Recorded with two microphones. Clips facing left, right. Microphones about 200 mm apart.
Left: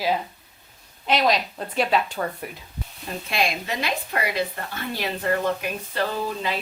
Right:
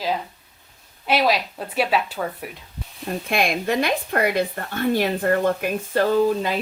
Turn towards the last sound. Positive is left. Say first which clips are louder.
# right 8 dB
turn(degrees=-45)  # may be behind; listen again after turning